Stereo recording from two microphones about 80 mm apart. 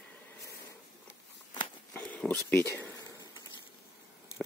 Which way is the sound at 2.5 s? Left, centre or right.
Left.